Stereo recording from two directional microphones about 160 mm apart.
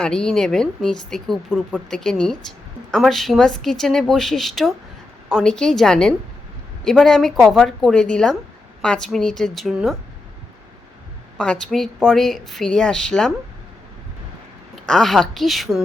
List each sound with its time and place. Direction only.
0.0 s speech: 5° left (ahead or behind)
11.3 s speech: 5° left (ahead or behind)
14.8 s speech: 5° left (ahead or behind)